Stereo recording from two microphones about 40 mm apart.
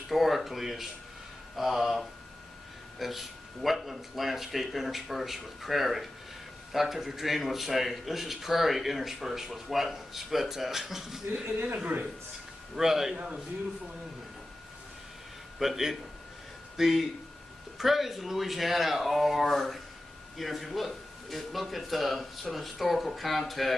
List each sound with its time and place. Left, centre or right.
0.1 s a man's voice: centre
12.7 s a man's voice: centre
13.1 s a man's voice: right
15.6 s a man's voice: centre